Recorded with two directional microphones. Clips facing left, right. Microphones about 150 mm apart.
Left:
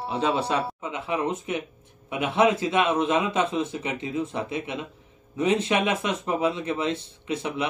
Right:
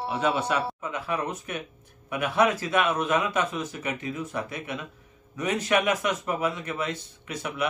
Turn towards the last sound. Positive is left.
turn(degrees=25)  # may be behind; listen again after turning